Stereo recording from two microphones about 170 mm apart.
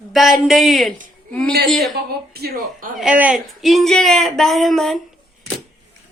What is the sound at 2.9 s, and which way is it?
A woman's voice, 5° right (ahead or behind).